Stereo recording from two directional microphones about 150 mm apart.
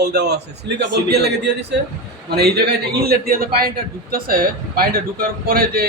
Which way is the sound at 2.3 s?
90° right.